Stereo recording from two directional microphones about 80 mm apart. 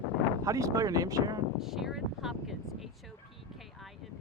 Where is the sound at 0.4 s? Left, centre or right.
Right.